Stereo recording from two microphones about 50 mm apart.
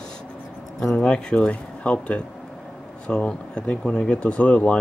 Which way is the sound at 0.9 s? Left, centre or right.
Centre.